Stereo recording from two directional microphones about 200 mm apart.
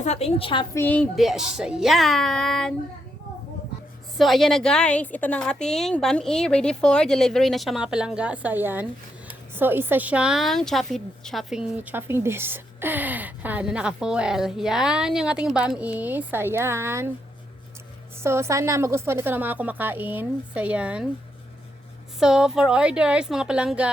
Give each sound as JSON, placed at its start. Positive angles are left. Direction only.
{"t": 0.0, "sound": "a woman's voice", "side_deg": 30}
{"t": 0.8, "sound": "a woman's voice", "side_deg": 10}
{"t": 4.2, "sound": "a woman's voice", "side_deg": 0}
{"t": 18.2, "sound": "a woman's voice", "side_deg": -15}
{"t": 22.2, "sound": "a woman's voice", "side_deg": -5}